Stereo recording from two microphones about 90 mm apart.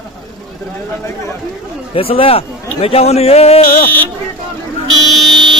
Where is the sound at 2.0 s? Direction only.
90° left.